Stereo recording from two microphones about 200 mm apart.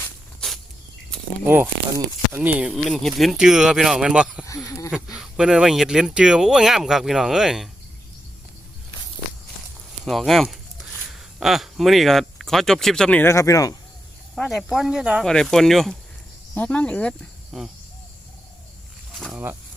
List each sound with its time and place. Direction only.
0.0 s a sound: centre (ahead or behind)
2.3 s speech: 10° right (ahead or behind)
4.4 s speech: 15° left (ahead or behind)
4.9 s speech: centre (ahead or behind)
10.0 s speech: centre (ahead or behind); by 13.7 s 15° left (ahead or behind)
14.3 s speech: centre (ahead or behind)
19.1 s a sound: centre (ahead or behind)